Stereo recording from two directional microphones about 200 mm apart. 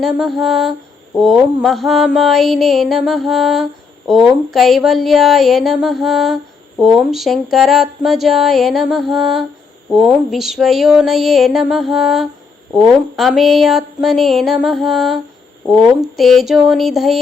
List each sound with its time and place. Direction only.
0.0 s mantra: centre (ahead or behind)